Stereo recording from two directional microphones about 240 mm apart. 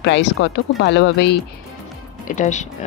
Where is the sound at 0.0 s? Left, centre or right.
Left.